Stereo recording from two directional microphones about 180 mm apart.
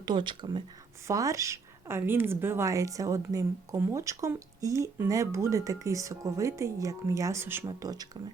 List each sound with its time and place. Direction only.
0.0 s a woman's voice: 25° right (ahead or behind)